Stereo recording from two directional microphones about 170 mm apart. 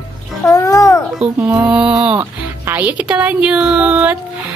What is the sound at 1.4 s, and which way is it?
Child singing, 10° right (ahead or behind).